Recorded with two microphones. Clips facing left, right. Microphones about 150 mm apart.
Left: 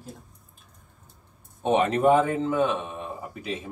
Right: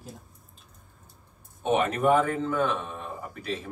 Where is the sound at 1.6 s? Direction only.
30° left (ahead or behind).